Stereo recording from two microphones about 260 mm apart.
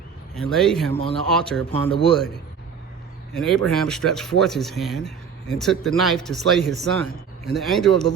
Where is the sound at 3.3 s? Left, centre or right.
Centre.